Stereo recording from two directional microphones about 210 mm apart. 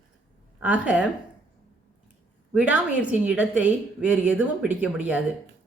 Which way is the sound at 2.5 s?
5° right (ahead or behind).